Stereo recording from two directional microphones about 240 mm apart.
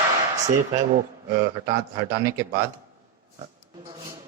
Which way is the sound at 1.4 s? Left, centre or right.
Right.